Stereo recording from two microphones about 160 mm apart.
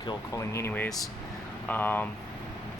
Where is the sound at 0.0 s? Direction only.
25° left (ahead or behind).